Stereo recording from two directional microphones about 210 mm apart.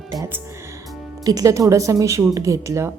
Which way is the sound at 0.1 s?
15° right (ahead or behind).